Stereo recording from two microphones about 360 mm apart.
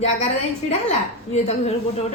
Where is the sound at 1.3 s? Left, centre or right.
Centre.